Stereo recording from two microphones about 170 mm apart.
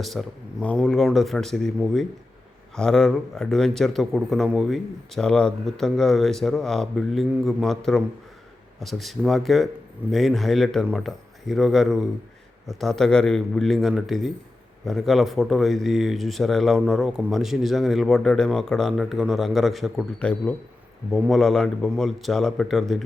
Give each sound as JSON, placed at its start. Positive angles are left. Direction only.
{"t": 0.0, "sound": "speech", "side_deg": 0}